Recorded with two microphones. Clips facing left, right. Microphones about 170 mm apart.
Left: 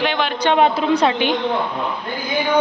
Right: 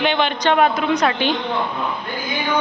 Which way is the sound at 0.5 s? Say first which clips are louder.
Left 2 dB; 30° left (ahead or behind).